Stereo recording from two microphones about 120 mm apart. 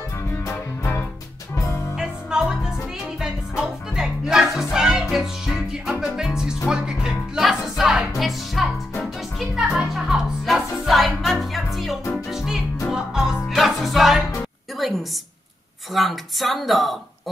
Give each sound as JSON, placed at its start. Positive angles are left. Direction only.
{"t": 0.3, "sound": "music", "side_deg": 20}
{"t": 2.0, "sound": "music", "side_deg": -5}
{"t": 14.8, "sound": "a sound", "side_deg": 0}